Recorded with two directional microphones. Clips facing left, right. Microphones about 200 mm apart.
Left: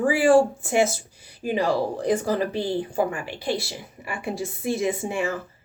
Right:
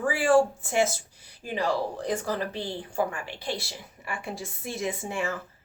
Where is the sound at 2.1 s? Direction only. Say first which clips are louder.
Left 8 dB; 10° left (ahead or behind).